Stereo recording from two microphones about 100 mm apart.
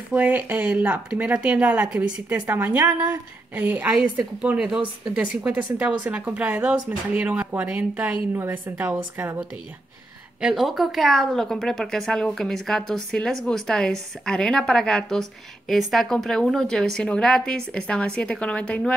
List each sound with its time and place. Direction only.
0.1 s speech: 15° right (ahead or behind)
10.4 s a woman's voice: 5° right (ahead or behind)